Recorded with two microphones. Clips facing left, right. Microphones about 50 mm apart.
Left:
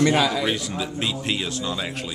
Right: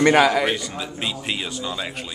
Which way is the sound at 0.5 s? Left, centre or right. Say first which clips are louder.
Left 1 dB; centre.